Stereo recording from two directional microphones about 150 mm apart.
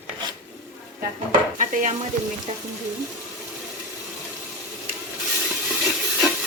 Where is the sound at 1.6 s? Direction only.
55° right (ahead or behind).